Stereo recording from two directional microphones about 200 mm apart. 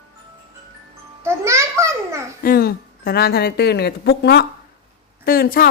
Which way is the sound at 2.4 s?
50° left (ahead or behind).